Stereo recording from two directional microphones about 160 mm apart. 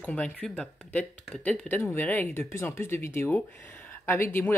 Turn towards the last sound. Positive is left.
turn(degrees=15)  # may be behind; listen again after turning